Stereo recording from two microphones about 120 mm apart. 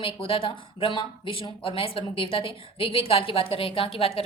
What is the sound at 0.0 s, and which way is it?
Speech, 50° left (ahead or behind).